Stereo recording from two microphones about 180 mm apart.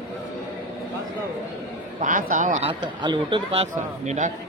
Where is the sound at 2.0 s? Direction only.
45° right (ahead or behind).